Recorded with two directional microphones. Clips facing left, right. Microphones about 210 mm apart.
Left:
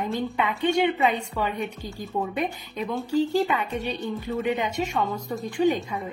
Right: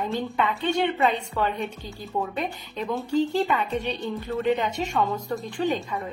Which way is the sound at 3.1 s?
10° left (ahead or behind).